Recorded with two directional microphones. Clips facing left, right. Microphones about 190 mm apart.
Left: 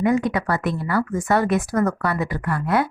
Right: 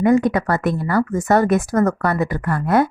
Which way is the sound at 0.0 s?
45° right (ahead or behind).